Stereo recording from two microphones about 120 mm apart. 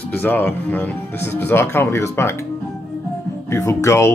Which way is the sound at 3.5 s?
25° left (ahead or behind).